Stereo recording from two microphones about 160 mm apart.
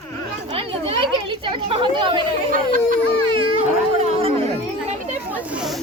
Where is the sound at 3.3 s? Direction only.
30° right (ahead or behind).